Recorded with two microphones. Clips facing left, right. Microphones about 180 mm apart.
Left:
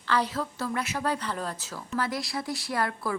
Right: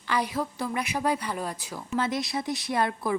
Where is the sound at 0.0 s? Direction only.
15° right (ahead or behind).